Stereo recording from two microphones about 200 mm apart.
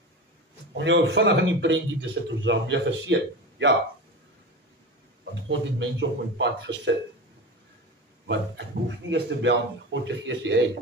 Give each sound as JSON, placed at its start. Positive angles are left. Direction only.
{"t": 0.7, "sound": "a man's voice", "side_deg": -65}
{"t": 5.5, "sound": "a man's voice", "side_deg": -65}
{"t": 8.3, "sound": "a man's voice", "side_deg": -65}